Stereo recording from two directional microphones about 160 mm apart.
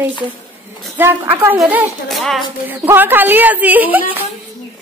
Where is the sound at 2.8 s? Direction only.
10° right (ahead or behind).